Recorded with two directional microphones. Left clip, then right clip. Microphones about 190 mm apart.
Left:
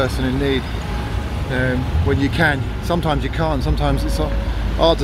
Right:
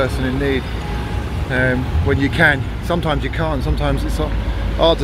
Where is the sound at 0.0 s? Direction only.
15° left (ahead or behind).